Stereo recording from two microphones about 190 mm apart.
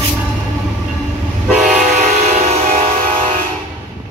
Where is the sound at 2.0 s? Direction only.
40° right (ahead or behind).